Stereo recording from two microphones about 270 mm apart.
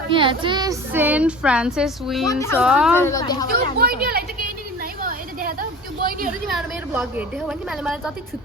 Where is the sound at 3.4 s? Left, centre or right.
Right.